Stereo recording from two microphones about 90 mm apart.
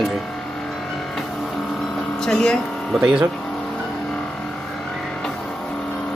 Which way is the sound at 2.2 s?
5° left (ahead or behind).